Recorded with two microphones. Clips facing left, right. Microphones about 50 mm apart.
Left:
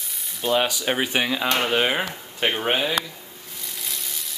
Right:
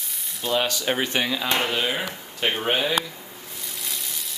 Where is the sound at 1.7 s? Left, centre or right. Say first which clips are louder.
Left 4 dB; left.